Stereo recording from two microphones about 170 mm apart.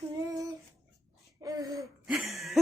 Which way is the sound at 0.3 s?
20° right (ahead or behind).